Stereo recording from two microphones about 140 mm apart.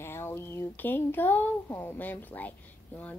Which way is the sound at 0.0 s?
20° left (ahead or behind).